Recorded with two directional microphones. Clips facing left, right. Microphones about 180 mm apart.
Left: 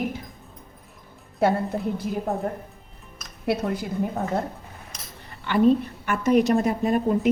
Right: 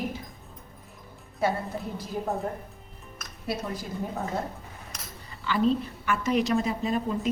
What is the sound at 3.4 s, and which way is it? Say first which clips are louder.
Speech: left 7 dB; 60° left (ahead or behind).